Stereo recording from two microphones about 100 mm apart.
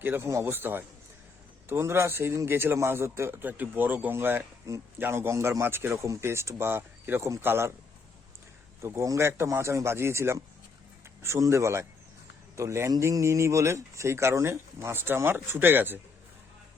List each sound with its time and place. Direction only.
0.0 s a man's voice: 25° right (ahead or behind)
8.8 s a man's voice: 30° right (ahead or behind)